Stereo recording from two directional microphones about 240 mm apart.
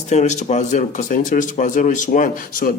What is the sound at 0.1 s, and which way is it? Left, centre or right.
Speech, left.